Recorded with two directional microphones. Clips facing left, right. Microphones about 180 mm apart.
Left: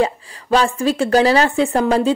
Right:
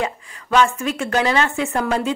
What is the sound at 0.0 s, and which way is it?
Speech, 35° left (ahead or behind).